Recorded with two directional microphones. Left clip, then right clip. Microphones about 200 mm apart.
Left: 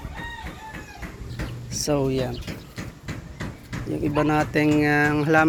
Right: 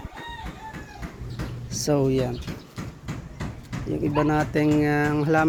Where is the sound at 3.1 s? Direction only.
65° right (ahead or behind).